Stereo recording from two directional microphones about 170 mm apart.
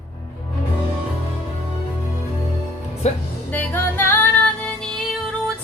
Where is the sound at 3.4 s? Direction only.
10° left (ahead or behind).